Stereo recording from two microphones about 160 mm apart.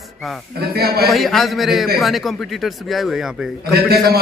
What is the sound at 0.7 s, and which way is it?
Speech, 75° right (ahead or behind).